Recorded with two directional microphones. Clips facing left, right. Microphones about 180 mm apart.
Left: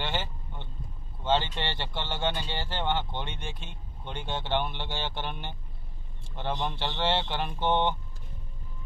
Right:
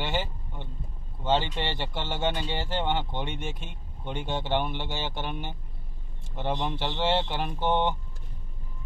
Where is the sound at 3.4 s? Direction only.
45° right (ahead or behind).